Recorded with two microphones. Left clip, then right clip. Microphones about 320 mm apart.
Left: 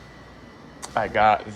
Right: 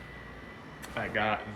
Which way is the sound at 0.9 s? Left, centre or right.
Centre.